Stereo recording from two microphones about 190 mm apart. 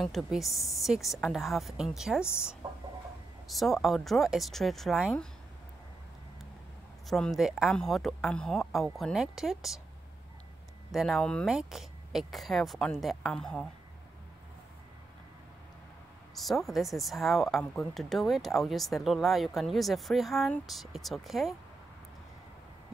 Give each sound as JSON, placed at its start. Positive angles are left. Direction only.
{"t": 0.0, "sound": "speech", "side_deg": 0}
{"t": 2.6, "sound": "chicken", "side_deg": -20}
{"t": 3.4, "sound": "speech", "side_deg": 0}
{"t": 7.1, "sound": "speech", "side_deg": 0}
{"t": 10.9, "sound": "speech", "side_deg": 0}
{"t": 16.3, "sound": "speech", "side_deg": 0}